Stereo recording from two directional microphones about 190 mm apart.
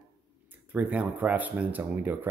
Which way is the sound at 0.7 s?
10° right (ahead or behind).